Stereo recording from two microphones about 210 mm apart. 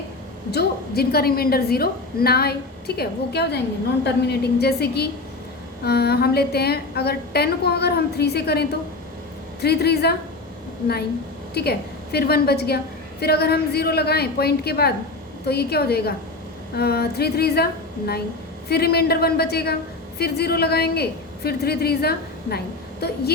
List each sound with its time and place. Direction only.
0.5 s a woman's voice: 50° left (ahead or behind)
11.5 s a woman's voice: 50° left (ahead or behind)
18.7 s a woman's voice: 50° left (ahead or behind)